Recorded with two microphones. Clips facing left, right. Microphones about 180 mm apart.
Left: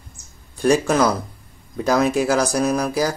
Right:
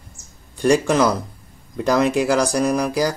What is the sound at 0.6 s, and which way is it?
Speech, centre (ahead or behind).